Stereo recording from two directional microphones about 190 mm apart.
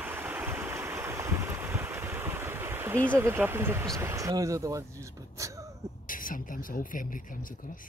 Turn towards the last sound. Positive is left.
turn(degrees=45)  # may be behind; listen again after turning